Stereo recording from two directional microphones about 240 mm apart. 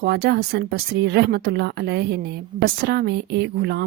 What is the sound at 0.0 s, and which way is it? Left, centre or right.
Speech, right.